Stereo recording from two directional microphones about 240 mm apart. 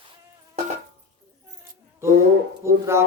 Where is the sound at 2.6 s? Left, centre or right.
Centre.